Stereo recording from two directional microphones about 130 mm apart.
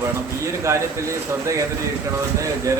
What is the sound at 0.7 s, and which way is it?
Speech, 25° right (ahead or behind).